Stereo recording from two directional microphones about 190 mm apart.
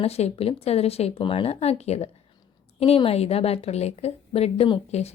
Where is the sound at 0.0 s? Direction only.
35° left (ahead or behind).